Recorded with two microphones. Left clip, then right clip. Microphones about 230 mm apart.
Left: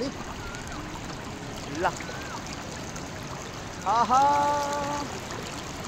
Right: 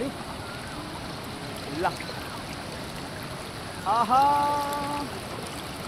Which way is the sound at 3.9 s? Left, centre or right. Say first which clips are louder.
Even; right.